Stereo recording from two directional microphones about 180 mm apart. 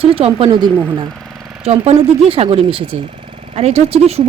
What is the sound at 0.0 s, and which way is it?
Speech, 30° right (ahead or behind).